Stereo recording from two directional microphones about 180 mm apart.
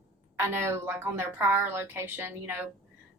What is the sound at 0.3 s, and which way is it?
A woman's voice, 15° right (ahead or behind).